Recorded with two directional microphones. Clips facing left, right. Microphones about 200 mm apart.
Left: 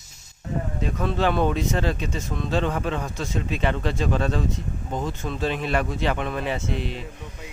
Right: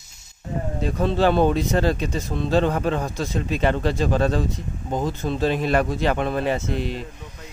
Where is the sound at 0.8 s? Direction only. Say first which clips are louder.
Right 4 dB; 35° right (ahead or behind).